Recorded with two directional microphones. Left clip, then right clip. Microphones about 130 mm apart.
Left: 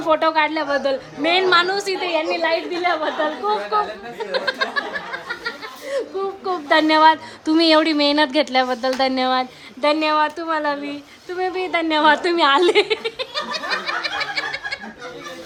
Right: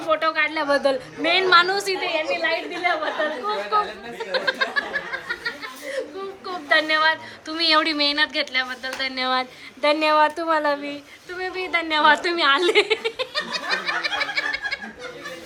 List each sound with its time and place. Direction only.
0.0 s a woman's voice: 40° left (ahead or behind)
0.6 s speech: 15° left (ahead or behind)
1.2 s a woman's voice: 25° left (ahead or behind)
2.0 s a woman's voice: 40° left (ahead or behind)
4.3 s a sound: 20° left (ahead or behind)
6.4 s a woman's voice: 40° left (ahead or behind)
7.7 s a woman's voice: 30° left (ahead or behind); by 9.2 s 50° left (ahead or behind)
9.2 s speech: 25° left (ahead or behind)
11.3 s speech: 30° left (ahead or behind); by 14.8 s 15° left (ahead or behind)